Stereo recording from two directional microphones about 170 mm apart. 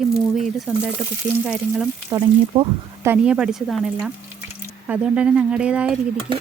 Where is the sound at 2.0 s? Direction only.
20° right (ahead or behind).